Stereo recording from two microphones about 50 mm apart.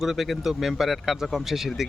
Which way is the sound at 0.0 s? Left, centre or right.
Centre.